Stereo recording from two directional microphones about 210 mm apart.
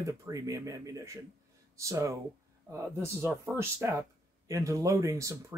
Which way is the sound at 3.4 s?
10° right (ahead or behind).